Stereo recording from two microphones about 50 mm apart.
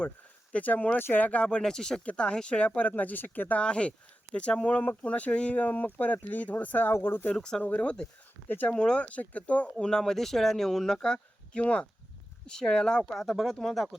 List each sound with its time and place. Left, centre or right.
0.5 s speech: left
1.3 s speech: left
3.6 s speech: left
7.3 s speech: centre
7.6 s speech: left
8.6 s speech: centre
9.0 s speech: left
9.8 s speech: centre
12.5 s speech: centre
13.1 s speech: centre